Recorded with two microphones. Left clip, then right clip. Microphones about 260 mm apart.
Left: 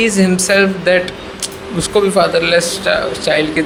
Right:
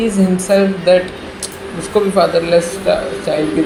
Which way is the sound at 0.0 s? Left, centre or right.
Left.